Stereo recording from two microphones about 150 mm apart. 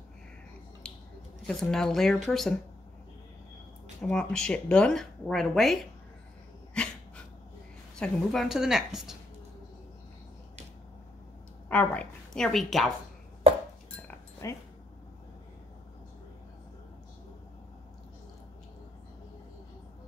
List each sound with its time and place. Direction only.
0.8 s a sound: 5° left (ahead or behind)
1.5 s speech: 5° left (ahead or behind)
4.0 s speech: 5° left (ahead or behind)
6.8 s dog: 5° left (ahead or behind)
8.0 s speech: 5° left (ahead or behind)
11.7 s speech: 10° left (ahead or behind)
14.4 s speech: 20° left (ahead or behind)